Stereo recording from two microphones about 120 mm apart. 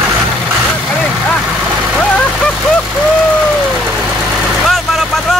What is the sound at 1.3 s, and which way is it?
Vehicle, 5° left (ahead or behind).